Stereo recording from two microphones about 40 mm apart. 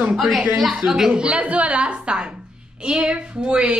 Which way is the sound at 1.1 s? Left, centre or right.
Right.